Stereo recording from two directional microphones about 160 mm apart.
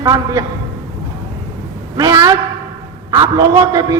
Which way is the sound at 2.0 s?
20° right (ahead or behind).